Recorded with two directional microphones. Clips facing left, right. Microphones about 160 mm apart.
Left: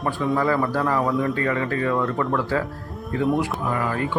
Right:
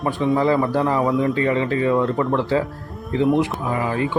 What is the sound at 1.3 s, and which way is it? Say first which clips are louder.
Speech: right 4 dB; 20° right (ahead or behind).